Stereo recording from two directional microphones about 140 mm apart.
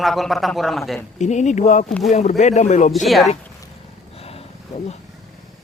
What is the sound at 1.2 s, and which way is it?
Speech, 60° left (ahead or behind).